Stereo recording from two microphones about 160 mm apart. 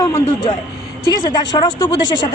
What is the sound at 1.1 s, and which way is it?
Speech, 25° left (ahead or behind).